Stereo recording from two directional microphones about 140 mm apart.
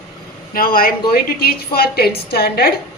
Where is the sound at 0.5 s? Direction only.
90° left.